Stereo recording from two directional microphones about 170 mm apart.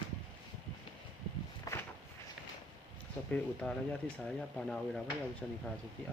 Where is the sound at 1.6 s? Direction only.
15° left (ahead or behind).